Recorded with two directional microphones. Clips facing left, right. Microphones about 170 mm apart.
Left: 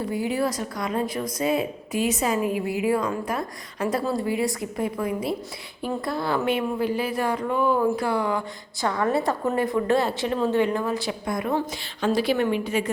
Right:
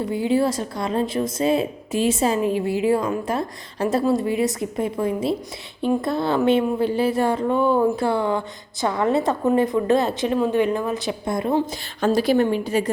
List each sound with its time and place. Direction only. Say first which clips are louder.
0.0 s speech: right 5 dB; 25° right (ahead or behind)
11.9 s a woman's voice: right 4 dB; 45° right (ahead or behind)